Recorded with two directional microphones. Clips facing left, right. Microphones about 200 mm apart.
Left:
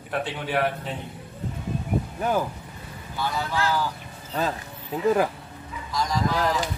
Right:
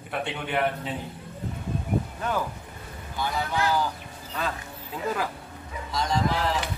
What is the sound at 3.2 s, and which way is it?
Speech, 15° right (ahead or behind).